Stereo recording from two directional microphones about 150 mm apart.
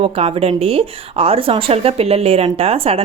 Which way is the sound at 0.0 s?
40° right (ahead or behind).